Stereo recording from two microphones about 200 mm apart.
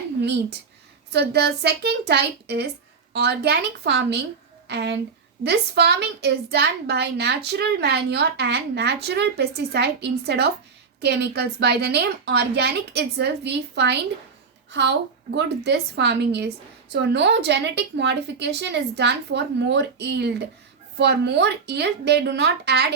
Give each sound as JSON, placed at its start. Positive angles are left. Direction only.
{"t": 1.1, "sound": "a woman's voice", "side_deg": -55}